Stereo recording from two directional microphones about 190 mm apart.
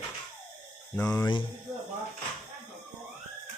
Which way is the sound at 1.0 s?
5° left (ahead or behind).